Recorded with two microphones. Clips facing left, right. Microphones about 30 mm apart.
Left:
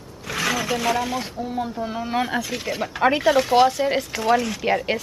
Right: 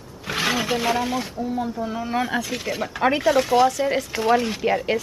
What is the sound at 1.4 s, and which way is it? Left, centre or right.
Speech, centre.